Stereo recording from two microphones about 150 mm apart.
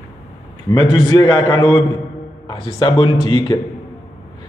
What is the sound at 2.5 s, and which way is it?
A man's voice, 35° left (ahead or behind).